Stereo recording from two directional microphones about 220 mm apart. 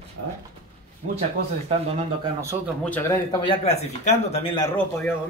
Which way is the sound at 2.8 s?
10° left (ahead or behind).